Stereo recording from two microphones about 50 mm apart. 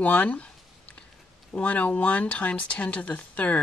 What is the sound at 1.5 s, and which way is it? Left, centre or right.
Speech, left.